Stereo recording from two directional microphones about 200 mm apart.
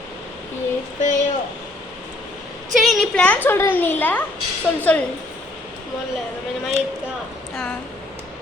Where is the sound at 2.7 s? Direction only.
Centre (ahead or behind).